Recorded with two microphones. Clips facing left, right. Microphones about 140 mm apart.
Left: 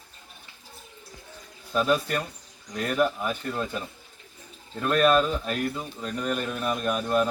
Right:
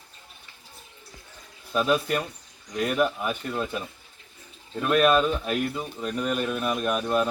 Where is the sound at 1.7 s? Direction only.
5° right (ahead or behind).